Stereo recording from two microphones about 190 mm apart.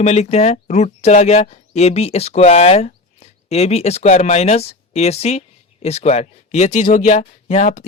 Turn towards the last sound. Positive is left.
turn(degrees=40)  # may be behind; listen again after turning